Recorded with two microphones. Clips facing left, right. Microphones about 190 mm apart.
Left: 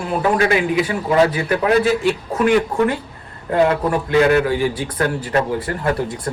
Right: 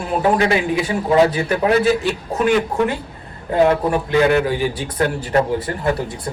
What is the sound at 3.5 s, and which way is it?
Speech, 25° right (ahead or behind).